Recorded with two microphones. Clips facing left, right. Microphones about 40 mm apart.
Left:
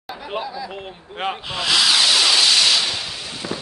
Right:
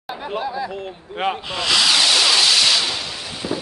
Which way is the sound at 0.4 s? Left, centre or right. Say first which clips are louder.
Right 4 dB; right.